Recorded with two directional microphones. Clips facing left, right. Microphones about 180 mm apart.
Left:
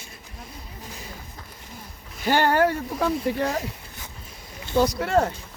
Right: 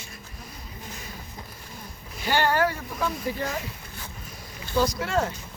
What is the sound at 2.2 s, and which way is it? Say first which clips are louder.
Speech: left 3 dB; 50° left (ahead or behind).